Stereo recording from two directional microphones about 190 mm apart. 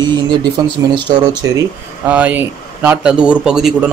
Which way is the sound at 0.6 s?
25° right (ahead or behind).